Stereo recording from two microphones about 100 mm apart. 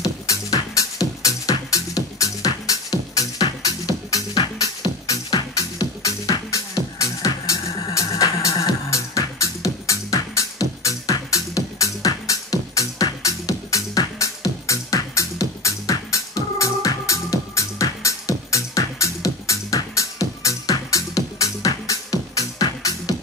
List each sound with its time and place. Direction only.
0.0 s music: 35° left (ahead or behind)